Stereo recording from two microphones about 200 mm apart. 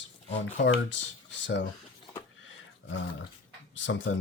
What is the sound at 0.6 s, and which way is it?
Speech, 65° left (ahead or behind).